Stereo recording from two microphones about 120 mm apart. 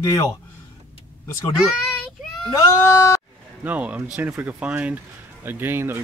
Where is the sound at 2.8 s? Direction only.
25° left (ahead or behind).